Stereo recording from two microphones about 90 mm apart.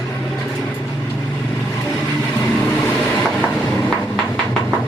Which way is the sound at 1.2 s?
10° left (ahead or behind).